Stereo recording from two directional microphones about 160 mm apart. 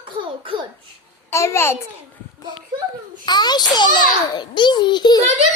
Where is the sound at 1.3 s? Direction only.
15° left (ahead or behind).